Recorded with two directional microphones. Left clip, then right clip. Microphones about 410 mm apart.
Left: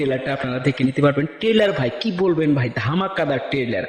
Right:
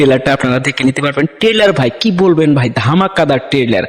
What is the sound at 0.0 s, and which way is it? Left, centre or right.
A man's voice, right.